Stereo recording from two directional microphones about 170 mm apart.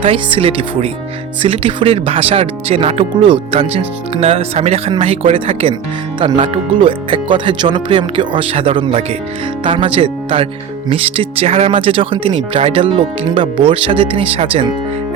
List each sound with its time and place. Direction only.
0.0 s speech: 30° right (ahead or behind)